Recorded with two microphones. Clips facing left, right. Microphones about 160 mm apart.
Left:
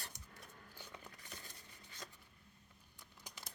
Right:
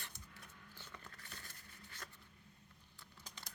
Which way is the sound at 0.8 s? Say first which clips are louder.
Left 2 dB; 15° left (ahead or behind).